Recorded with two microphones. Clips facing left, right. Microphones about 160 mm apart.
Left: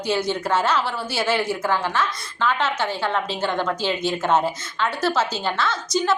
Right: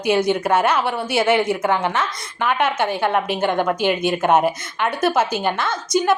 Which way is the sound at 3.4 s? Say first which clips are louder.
Right 4 dB; 20° right (ahead or behind).